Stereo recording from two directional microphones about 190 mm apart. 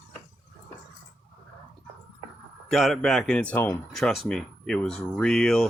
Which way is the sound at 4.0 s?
Centre (ahead or behind).